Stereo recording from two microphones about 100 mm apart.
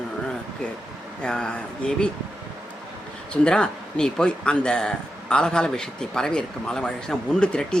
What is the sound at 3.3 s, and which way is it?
Speech, 10° left (ahead or behind).